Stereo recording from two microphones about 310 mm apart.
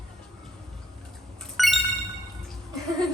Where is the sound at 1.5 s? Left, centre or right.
Centre.